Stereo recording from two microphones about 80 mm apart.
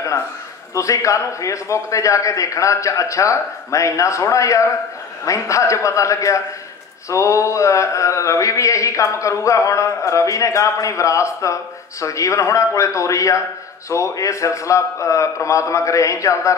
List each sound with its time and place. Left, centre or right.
0.7 s speech: left